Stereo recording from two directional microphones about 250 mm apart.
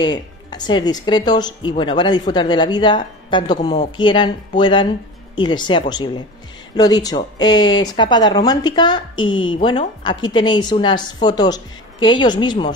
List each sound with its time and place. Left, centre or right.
0.0 s speech: centre